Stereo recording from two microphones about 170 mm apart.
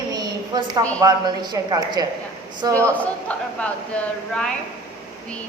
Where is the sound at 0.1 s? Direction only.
25° right (ahead or behind).